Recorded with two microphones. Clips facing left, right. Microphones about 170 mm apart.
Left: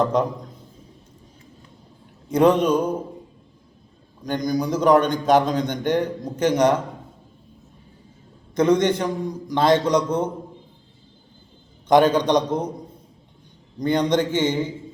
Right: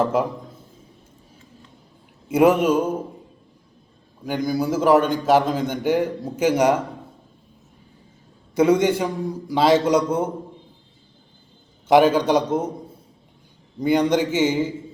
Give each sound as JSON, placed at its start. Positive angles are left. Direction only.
{"t": 0.0, "sound": "a man's voice", "side_deg": -5}
{"t": 2.3, "sound": "a man's voice", "side_deg": -5}
{"t": 4.2, "sound": "a man's voice", "side_deg": -5}
{"t": 8.5, "sound": "a man's voice", "side_deg": -10}
{"t": 11.9, "sound": "a man's voice", "side_deg": -10}
{"t": 13.7, "sound": "a man's voice", "side_deg": -10}